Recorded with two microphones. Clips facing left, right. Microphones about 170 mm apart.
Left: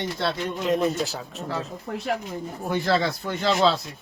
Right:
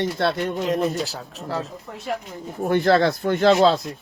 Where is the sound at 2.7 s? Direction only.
55° right (ahead or behind).